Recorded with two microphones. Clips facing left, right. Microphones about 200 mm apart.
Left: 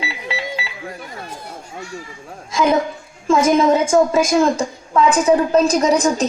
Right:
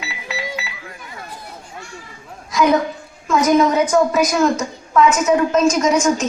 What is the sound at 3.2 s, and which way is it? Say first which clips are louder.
A woman's voice: left 1 dB; 25° left (ahead or behind).